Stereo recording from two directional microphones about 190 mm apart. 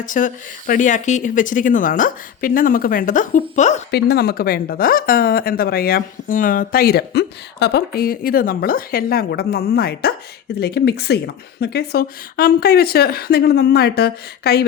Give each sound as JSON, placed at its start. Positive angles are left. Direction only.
{"t": 0.0, "sound": "speech", "side_deg": 45}
{"t": 3.9, "sound": "a woman's voice", "side_deg": 55}